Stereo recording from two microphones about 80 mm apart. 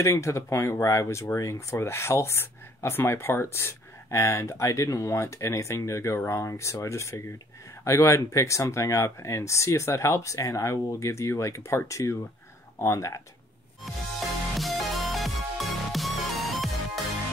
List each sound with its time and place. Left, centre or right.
0.0 s speech: left
14.6 s music: centre